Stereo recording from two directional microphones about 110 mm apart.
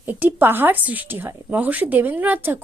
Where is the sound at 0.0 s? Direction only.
15° right (ahead or behind).